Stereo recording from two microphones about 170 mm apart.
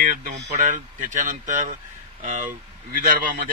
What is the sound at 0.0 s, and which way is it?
A man's voice, 50° right (ahead or behind).